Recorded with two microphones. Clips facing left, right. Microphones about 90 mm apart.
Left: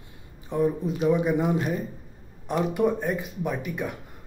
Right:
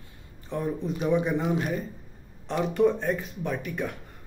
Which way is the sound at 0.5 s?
15° left (ahead or behind).